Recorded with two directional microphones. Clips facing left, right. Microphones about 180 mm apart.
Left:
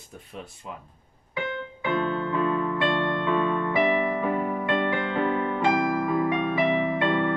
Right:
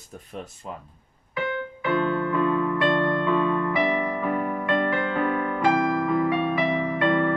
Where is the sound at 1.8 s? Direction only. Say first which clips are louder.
Right 2 dB; 20° left (ahead or behind).